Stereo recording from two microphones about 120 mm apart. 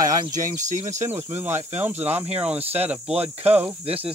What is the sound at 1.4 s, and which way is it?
Speech, 20° right (ahead or behind).